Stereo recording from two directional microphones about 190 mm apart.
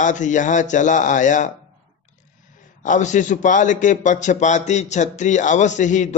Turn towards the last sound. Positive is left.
turn(degrees=40)  # may be behind; listen again after turning